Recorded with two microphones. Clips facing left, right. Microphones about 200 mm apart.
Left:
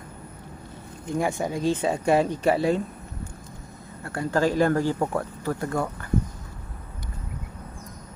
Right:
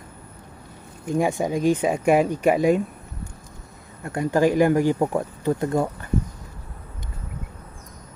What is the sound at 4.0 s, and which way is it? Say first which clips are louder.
Speech: right 4 dB; 20° right (ahead or behind).